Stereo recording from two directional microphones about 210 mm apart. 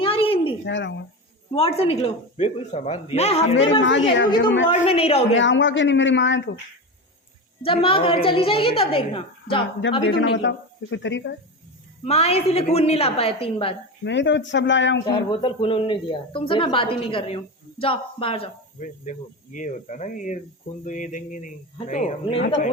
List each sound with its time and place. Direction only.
0.0 s a sound: 25° left (ahead or behind)
0.6 s speech: 60° left (ahead or behind)
1.5 s a woman's voice: 30° left (ahead or behind)
3.8 s speech: 65° left (ahead or behind)
4.7 s a woman's voice: 25° left (ahead or behind)
5.3 s speech: 60° left (ahead or behind)
7.6 s a woman's voice: 25° left (ahead or behind)
10.1 s speech: 55° left (ahead or behind)
12.0 s a woman's voice: 30° left (ahead or behind)
14.0 s speech: 60° left (ahead or behind)
15.3 s a woman's voice: 25° left (ahead or behind)